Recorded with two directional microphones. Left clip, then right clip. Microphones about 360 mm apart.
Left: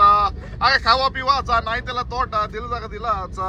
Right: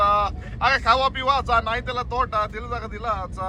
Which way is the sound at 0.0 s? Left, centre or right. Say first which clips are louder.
Left 5 dB; centre.